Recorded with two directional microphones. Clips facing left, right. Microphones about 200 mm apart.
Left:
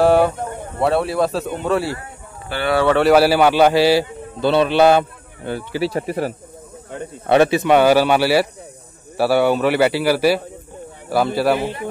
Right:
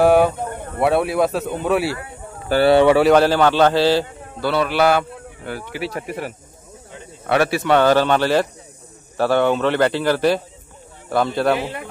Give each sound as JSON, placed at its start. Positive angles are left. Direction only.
{"t": 0.0, "sound": "a sound", "side_deg": 0}
{"t": 0.9, "sound": "speech", "side_deg": 0}
{"t": 2.5, "sound": "speech", "side_deg": -35}
{"t": 3.0, "sound": "a man's voice", "side_deg": 5}
{"t": 4.4, "sound": "a man's voice", "side_deg": 25}
{"t": 7.2, "sound": "a man's voice", "side_deg": 20}